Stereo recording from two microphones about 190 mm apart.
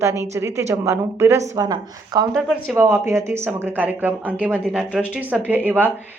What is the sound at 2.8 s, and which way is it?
A woman's voice, 15° right (ahead or behind).